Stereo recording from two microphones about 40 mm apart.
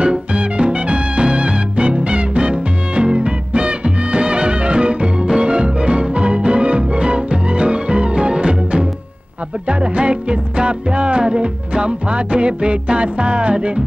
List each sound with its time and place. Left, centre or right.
0.0 s music: right